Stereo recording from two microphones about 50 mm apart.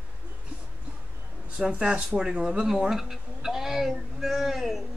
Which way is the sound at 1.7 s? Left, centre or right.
Right.